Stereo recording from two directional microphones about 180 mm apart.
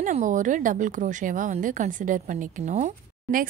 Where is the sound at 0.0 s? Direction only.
45° right (ahead or behind).